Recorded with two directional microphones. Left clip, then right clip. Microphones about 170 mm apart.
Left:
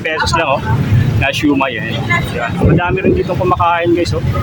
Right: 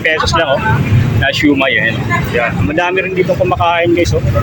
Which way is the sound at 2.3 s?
15° right (ahead or behind).